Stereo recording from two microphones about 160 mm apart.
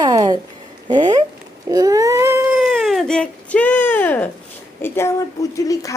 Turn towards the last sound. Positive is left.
turn(degrees=20)  # may be behind; listen again after turning